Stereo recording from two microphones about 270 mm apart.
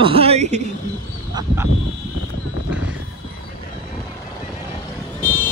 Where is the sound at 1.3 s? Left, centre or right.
Centre.